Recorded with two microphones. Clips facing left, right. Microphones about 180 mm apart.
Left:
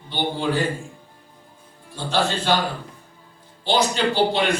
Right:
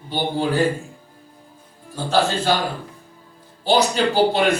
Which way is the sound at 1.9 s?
40° right (ahead or behind).